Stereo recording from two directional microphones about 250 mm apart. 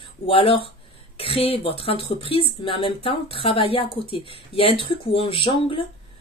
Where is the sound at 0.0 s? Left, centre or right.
Left.